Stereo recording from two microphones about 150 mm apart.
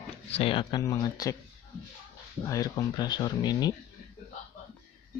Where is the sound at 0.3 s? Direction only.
40° left (ahead or behind).